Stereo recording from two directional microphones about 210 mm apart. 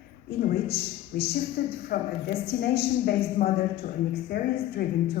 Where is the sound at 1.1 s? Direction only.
50° left (ahead or behind).